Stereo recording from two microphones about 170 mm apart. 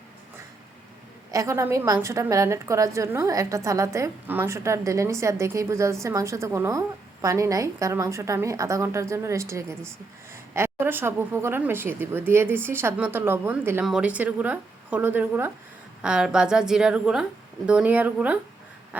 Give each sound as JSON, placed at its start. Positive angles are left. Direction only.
{"t": 1.3, "sound": "a woman's voice", "side_deg": -20}